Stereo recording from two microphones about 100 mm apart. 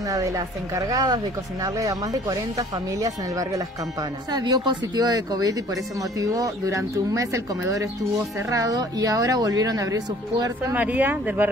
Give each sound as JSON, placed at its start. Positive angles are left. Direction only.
{"t": 0.1, "sound": "speech", "side_deg": -35}
{"t": 10.7, "sound": "speech", "side_deg": -15}